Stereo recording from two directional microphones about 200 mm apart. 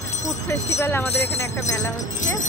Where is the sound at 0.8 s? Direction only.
10° left (ahead or behind).